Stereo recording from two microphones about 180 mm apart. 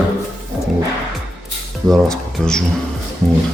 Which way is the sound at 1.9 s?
Centre (ahead or behind).